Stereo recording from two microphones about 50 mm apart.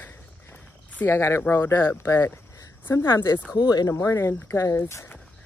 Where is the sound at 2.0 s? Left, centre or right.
Left.